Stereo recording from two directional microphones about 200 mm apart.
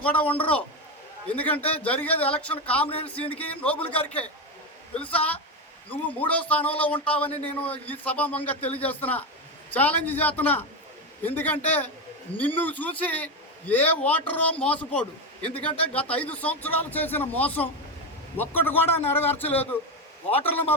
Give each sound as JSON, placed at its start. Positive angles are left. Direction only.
{"t": 0.0, "sound": "a man's voice", "side_deg": 5}
{"t": 0.3, "sound": "a man's voice", "side_deg": 25}
{"t": 1.3, "sound": "a man's voice", "side_deg": 10}